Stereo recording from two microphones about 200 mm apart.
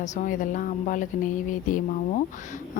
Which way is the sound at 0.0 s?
40° left (ahead or behind).